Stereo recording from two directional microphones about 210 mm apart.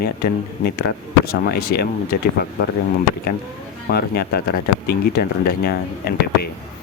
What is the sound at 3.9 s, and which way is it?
Speech, 45° left (ahead or behind).